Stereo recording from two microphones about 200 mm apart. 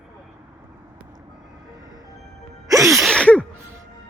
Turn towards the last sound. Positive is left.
turn(degrees=5)  # may be behind; listen again after turning